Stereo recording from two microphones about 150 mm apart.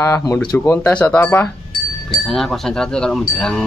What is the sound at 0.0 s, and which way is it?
Speech, 20° left (ahead or behind).